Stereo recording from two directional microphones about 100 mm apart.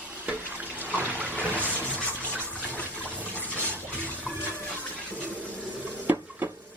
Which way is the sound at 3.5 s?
20° right (ahead or behind).